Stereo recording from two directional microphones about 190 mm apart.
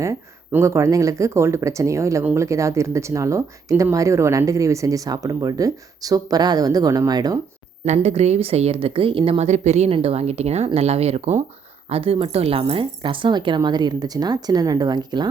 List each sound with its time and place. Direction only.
0.0 s speech: 15° right (ahead or behind)
7.9 s speech: 35° right (ahead or behind)